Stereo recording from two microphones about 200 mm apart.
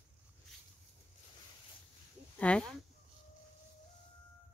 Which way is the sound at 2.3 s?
5° left (ahead or behind).